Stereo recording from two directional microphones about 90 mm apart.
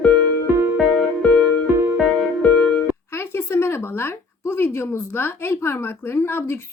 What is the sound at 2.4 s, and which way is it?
Music, 10° left (ahead or behind).